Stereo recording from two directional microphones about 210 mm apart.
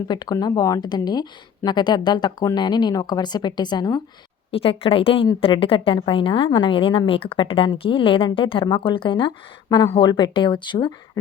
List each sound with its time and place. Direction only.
0.1 s a woman's voice: 20° left (ahead or behind)